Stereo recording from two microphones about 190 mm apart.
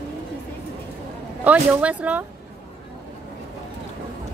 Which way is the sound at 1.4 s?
5° right (ahead or behind).